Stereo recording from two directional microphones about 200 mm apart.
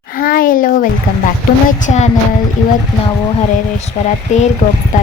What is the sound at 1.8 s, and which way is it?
Music, 35° left (ahead or behind).